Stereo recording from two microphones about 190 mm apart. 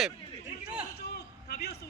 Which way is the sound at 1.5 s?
55° left (ahead or behind).